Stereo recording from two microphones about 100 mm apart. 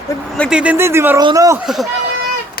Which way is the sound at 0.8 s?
25° right (ahead or behind).